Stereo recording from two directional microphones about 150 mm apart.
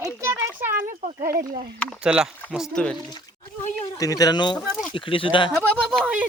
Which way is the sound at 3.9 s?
25° left (ahead or behind).